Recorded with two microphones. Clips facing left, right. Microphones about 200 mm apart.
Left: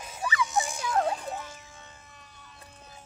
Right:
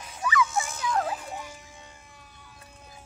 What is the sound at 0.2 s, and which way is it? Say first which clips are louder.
Music: right 4 dB; 30° left (ahead or behind).